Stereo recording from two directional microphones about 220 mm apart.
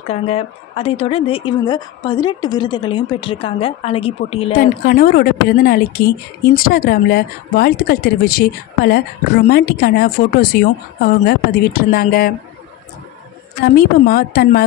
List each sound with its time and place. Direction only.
0.1 s a woman's voice: 25° left (ahead or behind)
4.6 s a woman's voice: 45° left (ahead or behind)
13.7 s a woman's voice: 45° left (ahead or behind)